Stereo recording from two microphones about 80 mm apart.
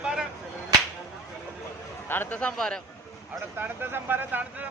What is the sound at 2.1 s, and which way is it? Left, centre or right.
Speech, left.